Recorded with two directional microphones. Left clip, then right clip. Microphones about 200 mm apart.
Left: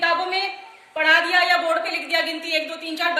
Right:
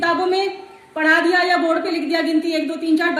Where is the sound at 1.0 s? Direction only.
10° left (ahead or behind).